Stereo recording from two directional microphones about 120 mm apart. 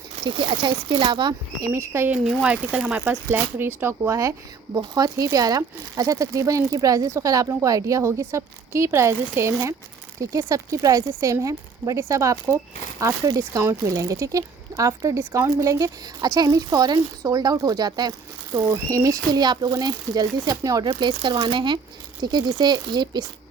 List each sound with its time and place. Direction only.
0.3 s speech: 45° right (ahead or behind)
1.7 s speech: 20° right (ahead or behind)
2.1 s speech: 5° right (ahead or behind); by 20.9 s 30° right (ahead or behind)
21.0 s speech: 45° right (ahead or behind)